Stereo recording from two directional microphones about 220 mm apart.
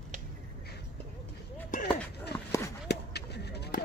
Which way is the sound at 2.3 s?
45° left (ahead or behind).